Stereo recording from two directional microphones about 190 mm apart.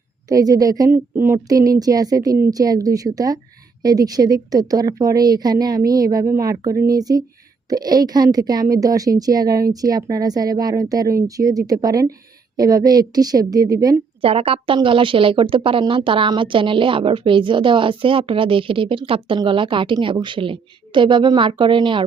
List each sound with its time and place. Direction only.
0.3 s a woman's voice: 20° right (ahead or behind)
14.2 s a woman's voice: 30° right (ahead or behind)